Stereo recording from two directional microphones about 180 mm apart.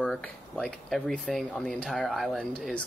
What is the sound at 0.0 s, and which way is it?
Speech, 5° left (ahead or behind).